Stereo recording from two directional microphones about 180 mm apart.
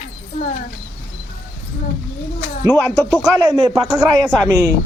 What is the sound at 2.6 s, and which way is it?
Speech, 10° left (ahead or behind).